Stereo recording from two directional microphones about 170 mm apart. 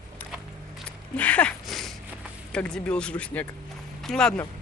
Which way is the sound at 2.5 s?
5° left (ahead or behind).